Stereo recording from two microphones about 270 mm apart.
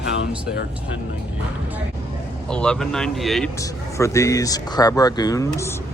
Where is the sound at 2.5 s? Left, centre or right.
Centre.